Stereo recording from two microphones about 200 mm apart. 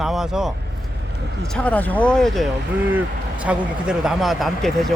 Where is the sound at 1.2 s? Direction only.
55° right (ahead or behind).